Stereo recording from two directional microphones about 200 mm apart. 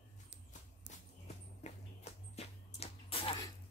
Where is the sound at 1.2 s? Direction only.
35° left (ahead or behind).